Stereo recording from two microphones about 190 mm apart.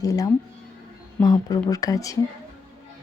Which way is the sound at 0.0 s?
20° left (ahead or behind).